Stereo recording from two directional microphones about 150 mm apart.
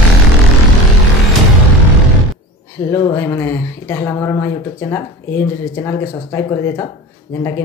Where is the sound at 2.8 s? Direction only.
15° left (ahead or behind).